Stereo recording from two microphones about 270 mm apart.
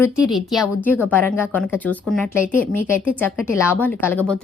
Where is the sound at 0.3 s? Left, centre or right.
Centre.